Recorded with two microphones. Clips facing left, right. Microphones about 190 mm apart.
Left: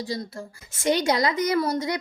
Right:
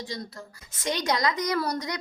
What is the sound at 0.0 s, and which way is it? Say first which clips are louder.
A woman's voice: left 5 dB; 30° left (ahead or behind).